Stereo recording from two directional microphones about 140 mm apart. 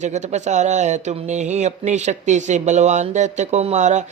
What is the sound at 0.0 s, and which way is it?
Speech, 55° right (ahead or behind).